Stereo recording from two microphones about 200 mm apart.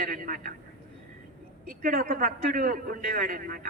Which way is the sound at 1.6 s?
45° right (ahead or behind).